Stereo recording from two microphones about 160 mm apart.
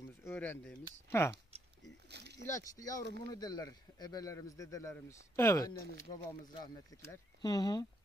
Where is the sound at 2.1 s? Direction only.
90° right.